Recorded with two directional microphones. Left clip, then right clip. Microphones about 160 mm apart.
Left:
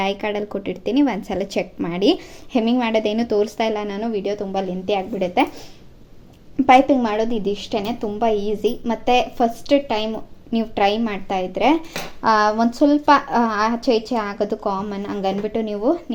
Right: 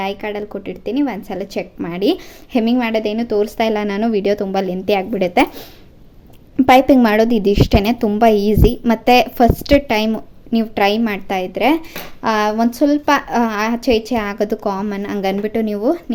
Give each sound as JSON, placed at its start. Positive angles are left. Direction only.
{"t": 0.0, "sound": "a woman's voice", "side_deg": 0}
{"t": 3.6, "sound": "a woman's voice", "side_deg": -25}
{"t": 6.6, "sound": "a woman's voice", "side_deg": -30}
{"t": 10.5, "sound": "speech", "side_deg": -20}